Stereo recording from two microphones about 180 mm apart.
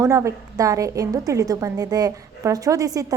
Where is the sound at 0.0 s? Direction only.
15° right (ahead or behind).